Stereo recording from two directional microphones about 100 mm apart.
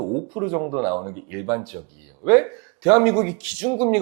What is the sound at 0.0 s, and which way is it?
Speech, 15° right (ahead or behind).